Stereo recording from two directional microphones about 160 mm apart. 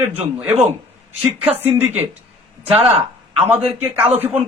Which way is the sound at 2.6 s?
40° right (ahead or behind).